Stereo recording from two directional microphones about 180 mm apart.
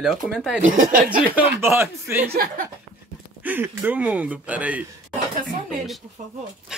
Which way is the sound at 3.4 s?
10° right (ahead or behind).